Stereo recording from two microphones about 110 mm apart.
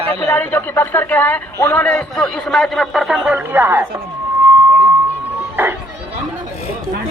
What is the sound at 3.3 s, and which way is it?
Speech, 20° right (ahead or behind).